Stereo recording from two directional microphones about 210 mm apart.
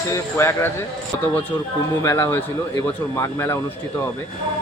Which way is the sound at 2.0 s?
15° left (ahead or behind).